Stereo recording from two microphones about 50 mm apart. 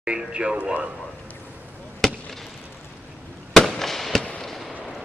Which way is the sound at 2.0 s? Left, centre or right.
Centre.